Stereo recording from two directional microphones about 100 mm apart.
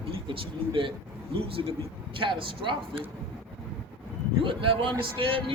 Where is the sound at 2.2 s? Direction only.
60° right (ahead or behind).